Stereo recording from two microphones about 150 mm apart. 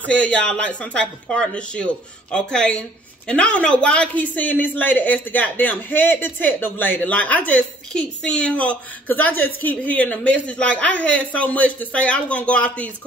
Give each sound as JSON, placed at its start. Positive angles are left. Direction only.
{"t": 0.0, "sound": "speech", "side_deg": 10}